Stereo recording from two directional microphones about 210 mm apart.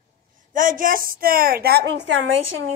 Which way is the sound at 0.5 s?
40° right (ahead or behind).